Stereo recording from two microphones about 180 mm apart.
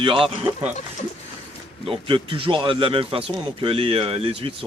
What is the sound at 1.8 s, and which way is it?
Speech, 30° right (ahead or behind).